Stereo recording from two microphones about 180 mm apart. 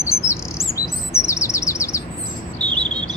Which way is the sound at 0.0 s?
15° left (ahead or behind).